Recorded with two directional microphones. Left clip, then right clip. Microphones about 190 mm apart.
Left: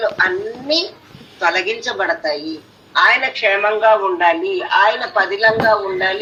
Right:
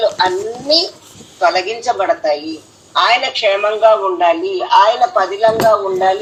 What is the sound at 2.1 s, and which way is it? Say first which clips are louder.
Speech: right 4 dB; 15° left (ahead or behind).